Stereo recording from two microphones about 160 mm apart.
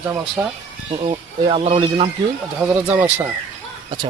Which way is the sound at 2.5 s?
10° right (ahead or behind).